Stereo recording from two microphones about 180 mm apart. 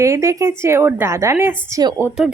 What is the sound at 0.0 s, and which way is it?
A woman's voice, 15° right (ahead or behind).